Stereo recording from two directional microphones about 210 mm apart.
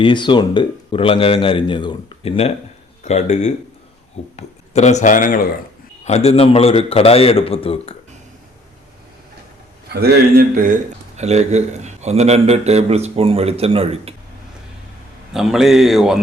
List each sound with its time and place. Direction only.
0.0 s speech: 20° left (ahead or behind)
9.9 s a man's voice: 50° right (ahead or behind)
11.2 s a man's voice: 30° right (ahead or behind)
15.3 s a man's voice: centre (ahead or behind)